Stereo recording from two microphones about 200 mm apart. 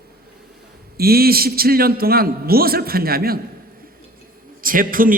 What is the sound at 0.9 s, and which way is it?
A man's voice, 50° right (ahead or behind).